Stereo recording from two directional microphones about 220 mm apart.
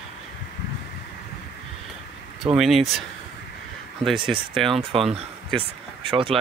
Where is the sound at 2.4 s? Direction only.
Centre (ahead or behind).